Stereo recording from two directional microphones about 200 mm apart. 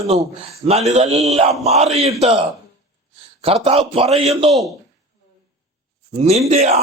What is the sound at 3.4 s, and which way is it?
A man's voice, 30° right (ahead or behind).